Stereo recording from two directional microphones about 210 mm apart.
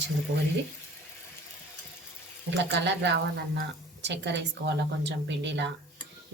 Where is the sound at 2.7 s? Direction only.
55° right (ahead or behind).